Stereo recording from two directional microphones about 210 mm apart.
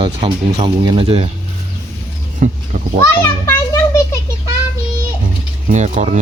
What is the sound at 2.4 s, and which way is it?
Speech, 35° right (ahead or behind).